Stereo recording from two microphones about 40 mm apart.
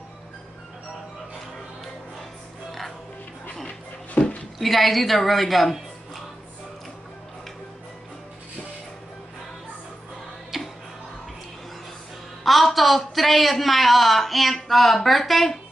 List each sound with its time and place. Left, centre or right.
4.2 s a sound: left
4.6 s a woman's voice: centre
10.5 s music: centre
12.4 s a man's voice: centre